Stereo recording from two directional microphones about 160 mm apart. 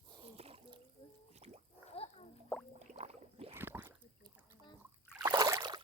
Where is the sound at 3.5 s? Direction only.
15° right (ahead or behind).